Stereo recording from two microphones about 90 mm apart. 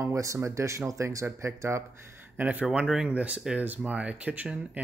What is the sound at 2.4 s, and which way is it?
Speech, 20° right (ahead or behind).